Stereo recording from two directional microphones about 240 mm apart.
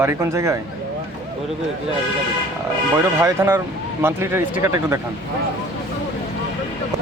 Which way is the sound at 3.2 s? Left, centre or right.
Centre.